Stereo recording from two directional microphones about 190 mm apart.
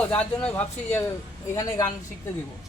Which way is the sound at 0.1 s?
5° left (ahead or behind).